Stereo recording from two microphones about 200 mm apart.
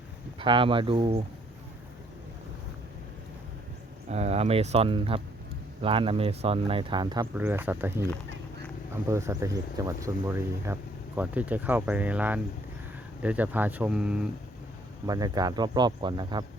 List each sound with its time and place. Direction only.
0.3 s speech: 25° right (ahead or behind)
4.1 s speech: 30° right (ahead or behind)
7.3 s speech: 10° right (ahead or behind)
15.0 s speech: 20° right (ahead or behind)